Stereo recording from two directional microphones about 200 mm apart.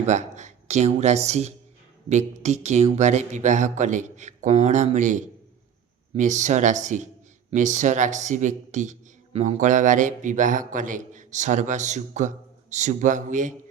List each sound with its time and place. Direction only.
0.0 s speech: 35° right (ahead or behind)